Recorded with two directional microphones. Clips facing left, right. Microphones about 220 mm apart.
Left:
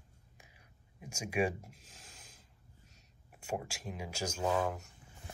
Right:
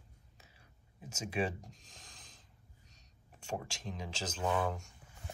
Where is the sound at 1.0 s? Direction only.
10° left (ahead or behind).